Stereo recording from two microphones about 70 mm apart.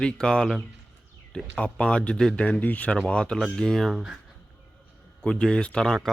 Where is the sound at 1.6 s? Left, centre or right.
Centre.